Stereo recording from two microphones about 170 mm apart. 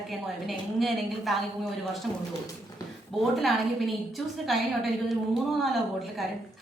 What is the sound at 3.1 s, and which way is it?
A woman's voice, centre (ahead or behind).